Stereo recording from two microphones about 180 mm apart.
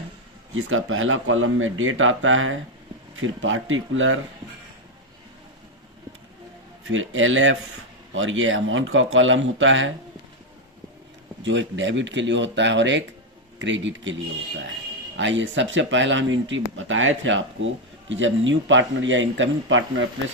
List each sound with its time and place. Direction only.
0.7 s speech: 90° right
6.8 s speech: 90° right
11.4 s speech: 90° right